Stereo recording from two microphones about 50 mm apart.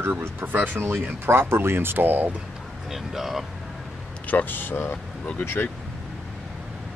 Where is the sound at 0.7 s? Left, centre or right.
Right.